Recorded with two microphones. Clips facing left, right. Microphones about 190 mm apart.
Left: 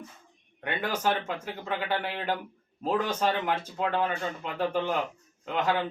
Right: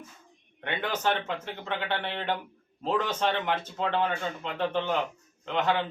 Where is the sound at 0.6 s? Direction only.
5° left (ahead or behind).